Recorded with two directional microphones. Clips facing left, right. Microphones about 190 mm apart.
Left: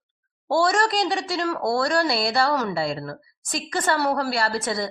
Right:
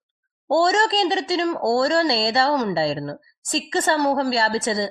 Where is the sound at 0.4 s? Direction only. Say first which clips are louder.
Right 2 dB; 20° right (ahead or behind).